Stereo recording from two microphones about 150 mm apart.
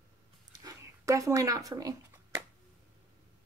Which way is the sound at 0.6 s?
25° right (ahead or behind).